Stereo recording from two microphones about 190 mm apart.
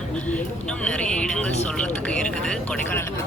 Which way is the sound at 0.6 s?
5° left (ahead or behind).